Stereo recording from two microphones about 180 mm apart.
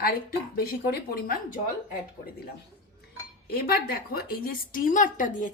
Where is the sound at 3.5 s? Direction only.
55° left (ahead or behind).